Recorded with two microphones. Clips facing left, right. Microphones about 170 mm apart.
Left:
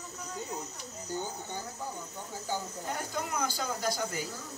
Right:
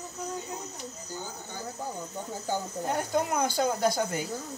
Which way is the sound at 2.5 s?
55° right (ahead or behind).